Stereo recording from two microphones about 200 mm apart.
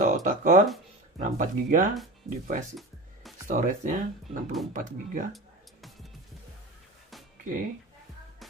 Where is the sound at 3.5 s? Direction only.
40° right (ahead or behind).